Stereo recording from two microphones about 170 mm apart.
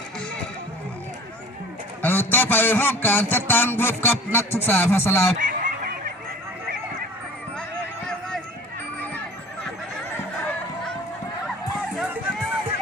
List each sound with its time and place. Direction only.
2.0 s a man's voice: 10° left (ahead or behind)
5.4 s a sound: 50° right (ahead or behind)
11.9 s music: 10° right (ahead or behind)